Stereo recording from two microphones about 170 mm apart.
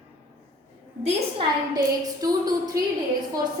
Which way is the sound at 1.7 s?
20° right (ahead or behind).